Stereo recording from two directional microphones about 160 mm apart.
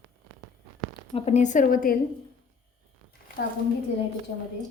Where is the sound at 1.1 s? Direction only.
45° left (ahead or behind).